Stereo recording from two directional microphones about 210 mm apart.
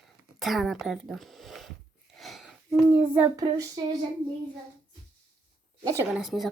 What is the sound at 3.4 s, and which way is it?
Speech, 20° right (ahead or behind).